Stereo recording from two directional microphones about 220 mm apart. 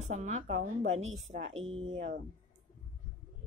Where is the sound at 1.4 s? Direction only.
60° right (ahead or behind).